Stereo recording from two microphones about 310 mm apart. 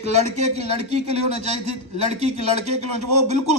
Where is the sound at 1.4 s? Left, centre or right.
Right.